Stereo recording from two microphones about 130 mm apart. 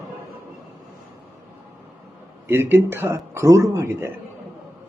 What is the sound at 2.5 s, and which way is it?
Speech, 15° right (ahead or behind).